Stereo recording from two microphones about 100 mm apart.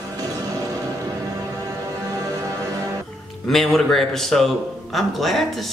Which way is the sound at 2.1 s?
35° right (ahead or behind).